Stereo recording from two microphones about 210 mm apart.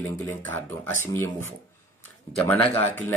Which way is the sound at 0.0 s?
10° left (ahead or behind).